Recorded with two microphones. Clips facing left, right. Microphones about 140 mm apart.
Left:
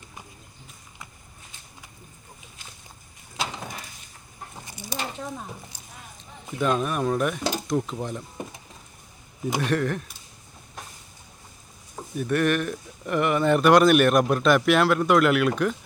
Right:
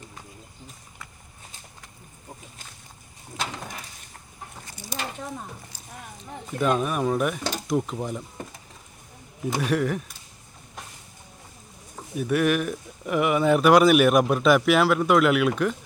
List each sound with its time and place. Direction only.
4.6 s a sound: 15° left (ahead or behind)
6.6 s speech: 5° right (ahead or behind)
9.6 s speech: 5° right (ahead or behind)
12.1 s speech: 5° right (ahead or behind)